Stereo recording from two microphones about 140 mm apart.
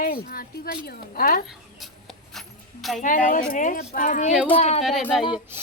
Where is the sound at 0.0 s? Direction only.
90° left.